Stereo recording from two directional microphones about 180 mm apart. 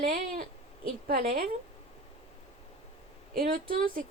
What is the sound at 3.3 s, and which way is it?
Speech, 50° right (ahead or behind).